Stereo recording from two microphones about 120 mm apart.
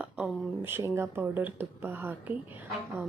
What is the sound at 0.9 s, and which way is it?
Speech, 20° right (ahead or behind).